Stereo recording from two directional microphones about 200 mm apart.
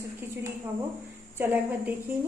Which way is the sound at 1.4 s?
10° right (ahead or behind).